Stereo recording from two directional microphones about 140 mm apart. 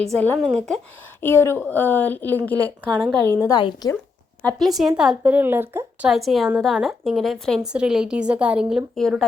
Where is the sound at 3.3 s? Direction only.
20° left (ahead or behind).